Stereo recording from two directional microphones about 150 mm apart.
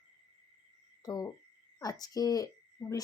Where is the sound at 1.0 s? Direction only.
25° left (ahead or behind).